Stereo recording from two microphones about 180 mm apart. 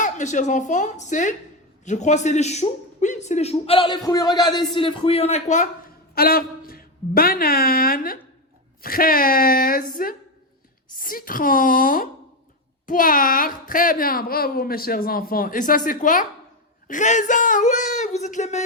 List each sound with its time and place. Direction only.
0.0 s a man's voice: 45° left (ahead or behind)
6.1 s a woman's voice: 55° left (ahead or behind); by 18.6 s 40° left (ahead or behind)